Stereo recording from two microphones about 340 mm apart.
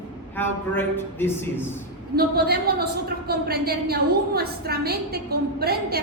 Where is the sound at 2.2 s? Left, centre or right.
Right.